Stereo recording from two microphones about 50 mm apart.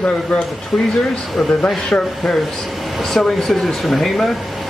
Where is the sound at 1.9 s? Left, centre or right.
Centre.